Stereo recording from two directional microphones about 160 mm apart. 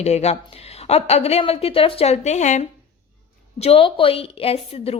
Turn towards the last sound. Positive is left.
turn(degrees=35)  # may be behind; listen again after turning